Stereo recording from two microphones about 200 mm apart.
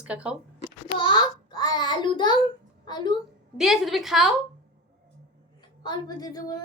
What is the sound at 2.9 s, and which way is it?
Speech, 20° left (ahead or behind).